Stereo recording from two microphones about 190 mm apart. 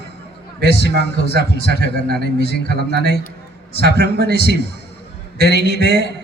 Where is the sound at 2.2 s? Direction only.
60° left (ahead or behind).